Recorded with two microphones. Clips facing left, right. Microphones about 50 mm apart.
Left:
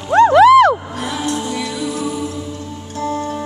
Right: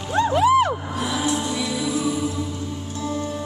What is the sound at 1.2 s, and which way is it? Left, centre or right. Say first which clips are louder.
Music: left 2 dB; left.